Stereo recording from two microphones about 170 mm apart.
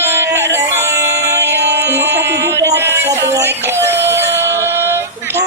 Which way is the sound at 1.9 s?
15° right (ahead or behind).